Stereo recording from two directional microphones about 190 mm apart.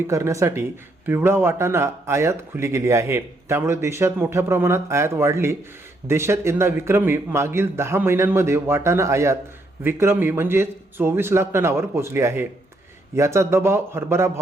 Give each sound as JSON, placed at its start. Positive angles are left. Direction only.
{"t": 0.1, "sound": "a man's voice", "side_deg": -15}